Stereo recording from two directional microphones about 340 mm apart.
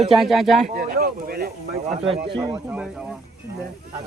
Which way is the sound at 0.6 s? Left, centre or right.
Right.